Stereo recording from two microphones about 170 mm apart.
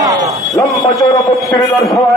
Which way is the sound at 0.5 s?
20° left (ahead or behind).